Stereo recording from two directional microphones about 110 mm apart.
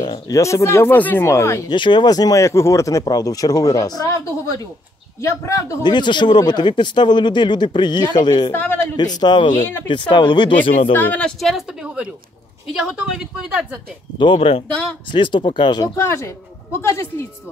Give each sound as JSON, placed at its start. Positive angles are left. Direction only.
{"t": 0.0, "sound": "speech", "side_deg": 35}
{"t": 1.7, "sound": "speech", "side_deg": 45}
{"t": 5.8, "sound": "speech", "side_deg": 45}
{"t": 8.5, "sound": "a man's voice", "side_deg": 20}
{"t": 8.9, "sound": "speech", "side_deg": 40}
{"t": 10.9, "sound": "a woman's voice", "side_deg": 15}
{"t": 14.1, "sound": "speech", "side_deg": 50}
{"t": 16.0, "sound": "speech", "side_deg": 25}